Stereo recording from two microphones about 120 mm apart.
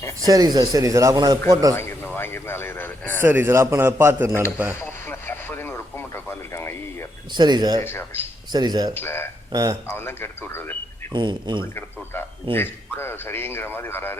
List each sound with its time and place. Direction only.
0.2 s speech: 30° right (ahead or behind)
1.7 s a man's voice: 20° left (ahead or behind)
3.2 s a man's voice: 20° right (ahead or behind)
4.7 s radio: 20° left (ahead or behind)
7.3 s speech: 35° right (ahead or behind)
7.9 s a man's voice: 20° left (ahead or behind)
8.5 s speech: 35° right (ahead or behind)
9.0 s a man's voice: 20° left (ahead or behind)
9.5 s speech: 30° right (ahead or behind)
9.9 s a man's voice: 20° left (ahead or behind)
11.1 s speech: 40° right (ahead or behind)
11.6 s a man's voice: 20° left (ahead or behind)